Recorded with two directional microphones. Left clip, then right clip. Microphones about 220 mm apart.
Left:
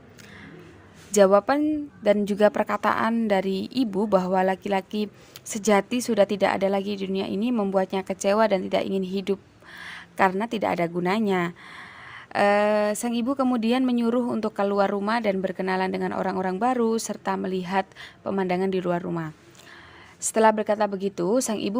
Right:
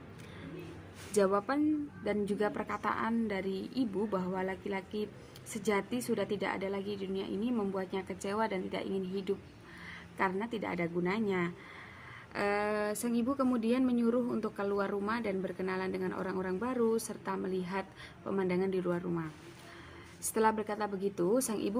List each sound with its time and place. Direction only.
1.1 s a woman's voice: 45° left (ahead or behind)
20.3 s a woman's voice: 45° left (ahead or behind)